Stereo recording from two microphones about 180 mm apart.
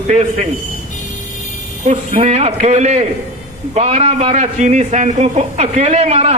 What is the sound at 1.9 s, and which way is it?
A man's voice, 40° right (ahead or behind).